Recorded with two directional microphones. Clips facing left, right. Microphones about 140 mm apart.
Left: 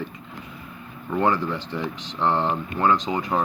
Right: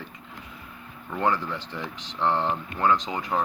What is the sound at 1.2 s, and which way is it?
Speech, 25° left (ahead or behind).